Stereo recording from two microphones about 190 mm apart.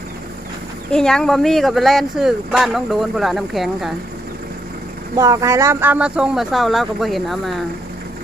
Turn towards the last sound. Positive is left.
turn(degrees=0)  # may be behind; listen again after turning